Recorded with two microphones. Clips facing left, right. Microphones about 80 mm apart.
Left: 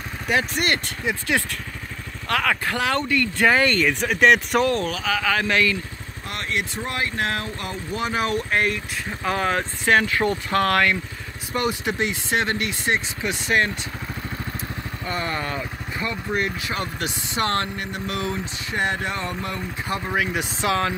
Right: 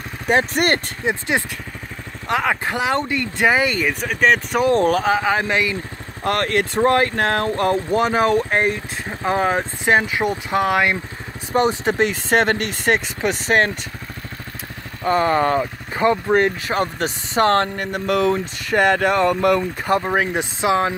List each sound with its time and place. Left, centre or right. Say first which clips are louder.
0.3 s speech: right 5 dB; right
1.0 s speech: right 2 dB; right
4.0 s speech: even; centre
4.7 s speech: right 9 dB; right
5.1 s speech: right 3 dB; right
6.2 s speech: right 9 dB; right; by 11.0 s centre
11.5 s speech: right 6 dB; right
15.0 s speech: right 11 dB; right
20.0 s speech: right 4 dB; right